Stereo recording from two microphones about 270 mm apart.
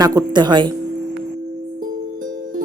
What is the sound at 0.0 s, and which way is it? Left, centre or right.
Speech, centre.